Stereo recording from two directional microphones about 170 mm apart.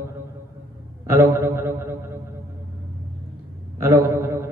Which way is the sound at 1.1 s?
15° right (ahead or behind).